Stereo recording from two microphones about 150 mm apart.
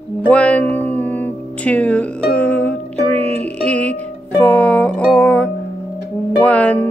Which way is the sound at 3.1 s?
45° right (ahead or behind).